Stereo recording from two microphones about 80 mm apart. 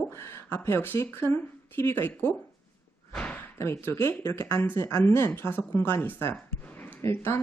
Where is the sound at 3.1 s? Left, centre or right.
Centre.